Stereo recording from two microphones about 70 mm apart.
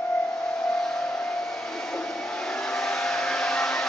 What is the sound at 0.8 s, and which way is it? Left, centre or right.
Vehicle, centre.